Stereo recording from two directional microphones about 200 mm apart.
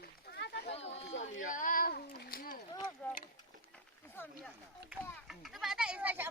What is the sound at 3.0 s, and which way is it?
Speech, 10° left (ahead or behind).